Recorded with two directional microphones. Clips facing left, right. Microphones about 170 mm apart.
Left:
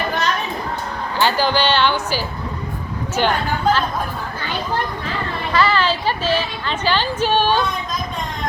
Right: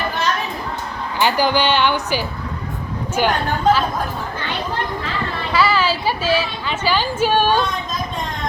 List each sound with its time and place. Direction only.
1.2 s a woman's voice: 15° right (ahead or behind)
5.5 s a woman's voice: 10° right (ahead or behind)